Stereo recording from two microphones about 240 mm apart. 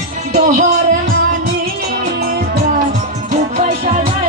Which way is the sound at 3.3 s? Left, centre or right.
Right.